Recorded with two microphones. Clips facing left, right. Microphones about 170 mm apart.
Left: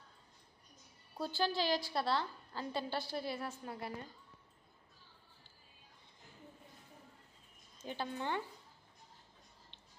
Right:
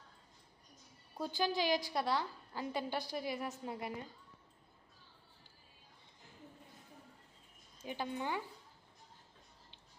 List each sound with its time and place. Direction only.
1.2 s a woman's voice: 15° right (ahead or behind)
7.8 s a woman's voice: 10° right (ahead or behind)